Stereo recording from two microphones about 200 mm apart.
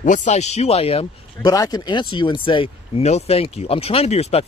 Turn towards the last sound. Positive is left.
turn(degrees=30)  # may be behind; listen again after turning